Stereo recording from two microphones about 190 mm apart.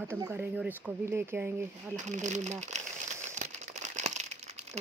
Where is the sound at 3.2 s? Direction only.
40° right (ahead or behind).